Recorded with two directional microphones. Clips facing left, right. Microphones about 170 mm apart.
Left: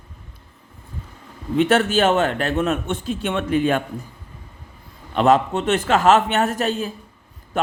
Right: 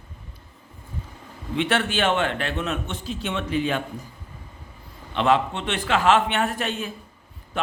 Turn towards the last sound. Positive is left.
turn(degrees=40)  # may be behind; listen again after turning